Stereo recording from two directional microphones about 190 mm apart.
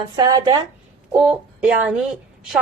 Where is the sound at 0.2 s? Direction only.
20° right (ahead or behind).